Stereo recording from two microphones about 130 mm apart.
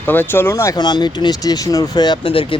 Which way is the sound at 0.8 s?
35° left (ahead or behind).